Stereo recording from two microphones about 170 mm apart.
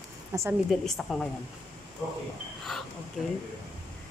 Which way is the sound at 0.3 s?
15° right (ahead or behind).